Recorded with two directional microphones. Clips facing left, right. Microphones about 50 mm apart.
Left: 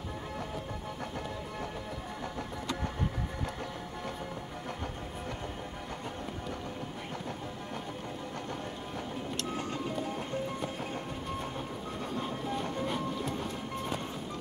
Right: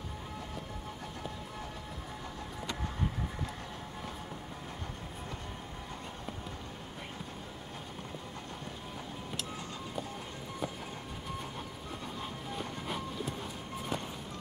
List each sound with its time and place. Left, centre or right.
9.5 s music: left
12.2 s train: centre